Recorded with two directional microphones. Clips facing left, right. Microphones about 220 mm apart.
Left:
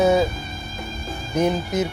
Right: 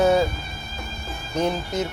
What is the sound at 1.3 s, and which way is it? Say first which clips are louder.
Speech: left 3 dB; 15° left (ahead or behind).